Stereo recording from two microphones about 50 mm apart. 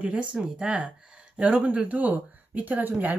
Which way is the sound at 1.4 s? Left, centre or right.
Right.